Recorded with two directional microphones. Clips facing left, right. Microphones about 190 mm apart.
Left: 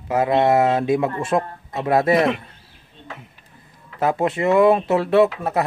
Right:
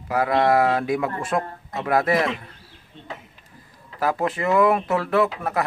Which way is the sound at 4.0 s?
25° left (ahead or behind).